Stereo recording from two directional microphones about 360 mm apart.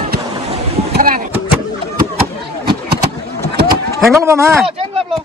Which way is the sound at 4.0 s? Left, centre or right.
Centre.